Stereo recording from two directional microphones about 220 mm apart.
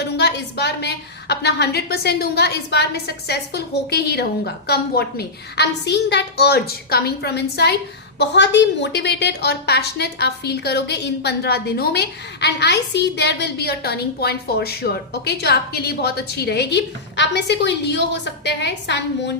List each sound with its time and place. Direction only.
0.0 s a woman's voice: 50° left (ahead or behind)